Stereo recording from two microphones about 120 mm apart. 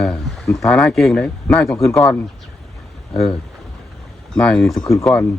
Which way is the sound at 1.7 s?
25° left (ahead or behind).